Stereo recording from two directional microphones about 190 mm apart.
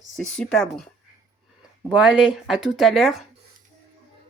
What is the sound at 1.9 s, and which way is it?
Speech, 5° right (ahead or behind).